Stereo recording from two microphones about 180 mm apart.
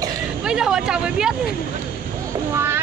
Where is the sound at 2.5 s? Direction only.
15° right (ahead or behind).